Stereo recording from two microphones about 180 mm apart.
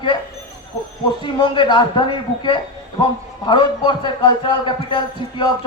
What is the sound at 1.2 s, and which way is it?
A man's voice, 25° left (ahead or behind).